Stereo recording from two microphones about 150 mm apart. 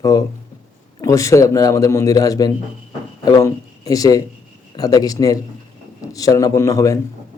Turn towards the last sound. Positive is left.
turn(degrees=20)  # may be behind; listen again after turning